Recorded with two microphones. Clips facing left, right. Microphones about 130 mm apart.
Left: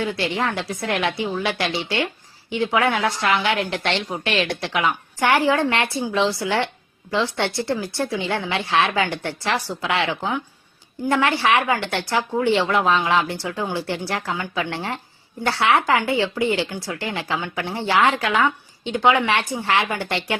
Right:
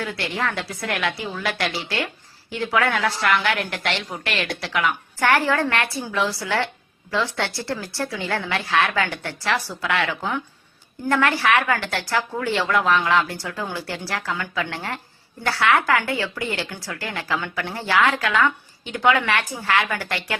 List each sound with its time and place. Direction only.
0.0 s a woman's voice: 20° left (ahead or behind)